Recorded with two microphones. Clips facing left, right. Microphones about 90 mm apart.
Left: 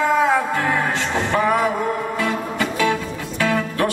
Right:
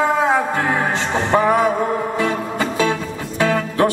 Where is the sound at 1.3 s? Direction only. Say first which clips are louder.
Right 4 dB; 20° right (ahead or behind).